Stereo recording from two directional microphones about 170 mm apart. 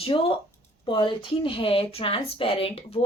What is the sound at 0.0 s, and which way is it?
Speech, 30° left (ahead or behind).